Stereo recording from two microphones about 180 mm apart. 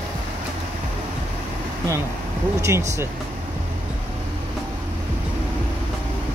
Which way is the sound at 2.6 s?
15° right (ahead or behind).